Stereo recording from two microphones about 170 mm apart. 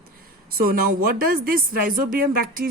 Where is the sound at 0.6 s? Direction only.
60° right (ahead or behind).